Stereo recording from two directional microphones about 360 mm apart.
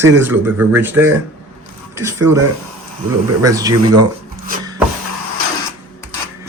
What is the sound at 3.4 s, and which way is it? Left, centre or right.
Speech, centre.